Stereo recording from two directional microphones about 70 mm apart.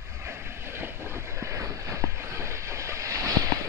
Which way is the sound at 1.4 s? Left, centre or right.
Right.